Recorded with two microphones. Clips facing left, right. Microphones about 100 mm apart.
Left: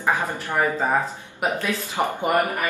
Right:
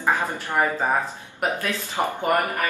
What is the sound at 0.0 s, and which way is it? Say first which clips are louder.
Speech: even; 15° left (ahead or behind).